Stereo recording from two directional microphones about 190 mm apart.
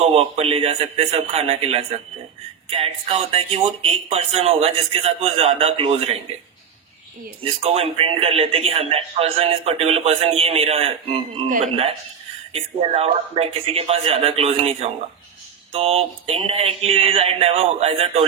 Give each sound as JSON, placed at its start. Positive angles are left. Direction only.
{"t": 0.0, "sound": "speech", "side_deg": -30}
{"t": 7.4, "sound": "speech", "side_deg": -30}